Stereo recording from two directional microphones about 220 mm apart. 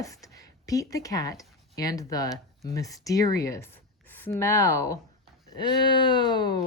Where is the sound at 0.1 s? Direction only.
15° left (ahead or behind).